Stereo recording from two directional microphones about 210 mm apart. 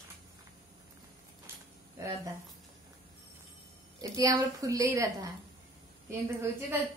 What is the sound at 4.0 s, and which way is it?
A woman's voice, 15° right (ahead or behind).